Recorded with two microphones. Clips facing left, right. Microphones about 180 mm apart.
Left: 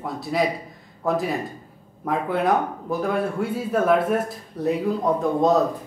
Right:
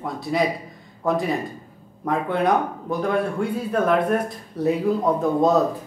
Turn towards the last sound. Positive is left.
turn(degrees=0)  # may be behind; listen again after turning